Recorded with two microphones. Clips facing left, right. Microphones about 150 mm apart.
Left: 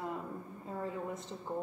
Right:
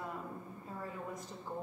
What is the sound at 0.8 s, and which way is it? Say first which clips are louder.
Speech: left 5 dB; 25° left (ahead or behind).